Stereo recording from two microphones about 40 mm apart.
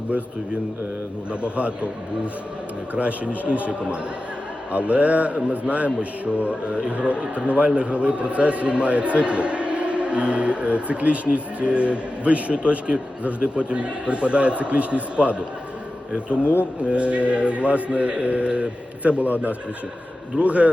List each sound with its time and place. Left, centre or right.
1.3 s a man's voice: right
16.4 s speech: left
16.8 s a man's voice: right
20.4 s a man's voice: right